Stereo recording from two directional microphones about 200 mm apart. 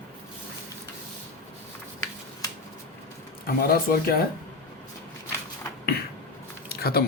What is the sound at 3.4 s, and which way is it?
Speech, 50° left (ahead or behind).